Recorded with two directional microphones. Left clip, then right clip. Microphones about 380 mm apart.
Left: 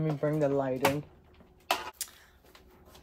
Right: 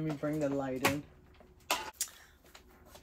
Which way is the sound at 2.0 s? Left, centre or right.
Centre.